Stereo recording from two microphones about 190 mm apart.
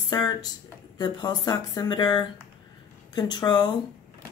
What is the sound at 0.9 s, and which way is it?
Speech, 20° left (ahead or behind).